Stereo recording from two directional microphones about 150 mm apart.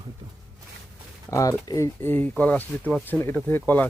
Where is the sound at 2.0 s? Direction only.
10° left (ahead or behind).